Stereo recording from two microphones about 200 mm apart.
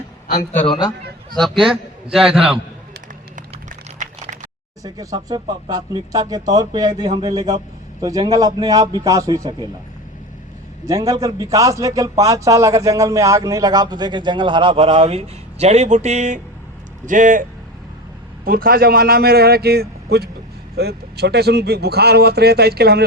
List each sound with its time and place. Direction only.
0.5 s a man's voice: 35° left (ahead or behind)
1.4 s a man's voice: centre (ahead or behind)
3.3 s a sound: 40° right (ahead or behind)
4.8 s a man's voice: 20° right (ahead or behind)
10.8 s a man's voice: 15° right (ahead or behind); by 17.4 s 40° right (ahead or behind)
18.4 s speech: 50° right (ahead or behind)